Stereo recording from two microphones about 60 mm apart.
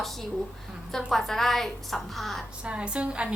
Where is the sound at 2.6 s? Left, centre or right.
Centre.